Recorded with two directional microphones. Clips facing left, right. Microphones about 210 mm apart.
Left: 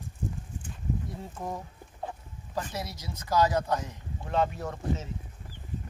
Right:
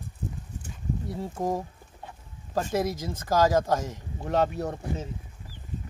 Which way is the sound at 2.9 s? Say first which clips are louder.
Right 2 dB; 50° right (ahead or behind).